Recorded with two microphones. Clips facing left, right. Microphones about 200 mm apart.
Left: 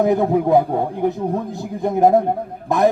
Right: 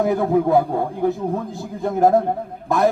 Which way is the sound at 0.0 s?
20° left (ahead or behind).